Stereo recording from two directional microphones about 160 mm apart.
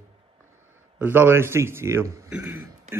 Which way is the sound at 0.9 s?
10° right (ahead or behind).